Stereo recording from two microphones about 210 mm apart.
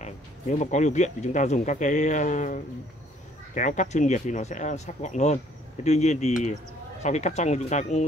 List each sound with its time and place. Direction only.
0.0 s speech: 35° left (ahead or behind)